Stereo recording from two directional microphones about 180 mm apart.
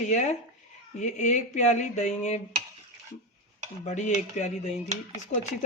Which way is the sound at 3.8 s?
40° left (ahead or behind).